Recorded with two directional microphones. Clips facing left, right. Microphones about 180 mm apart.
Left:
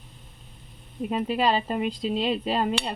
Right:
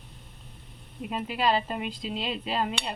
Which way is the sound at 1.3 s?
35° left (ahead or behind).